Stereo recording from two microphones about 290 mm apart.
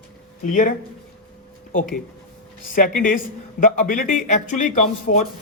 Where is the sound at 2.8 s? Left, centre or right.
Left.